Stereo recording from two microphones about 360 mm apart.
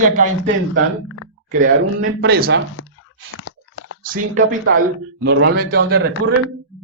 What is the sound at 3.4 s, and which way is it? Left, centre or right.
Crunch, left.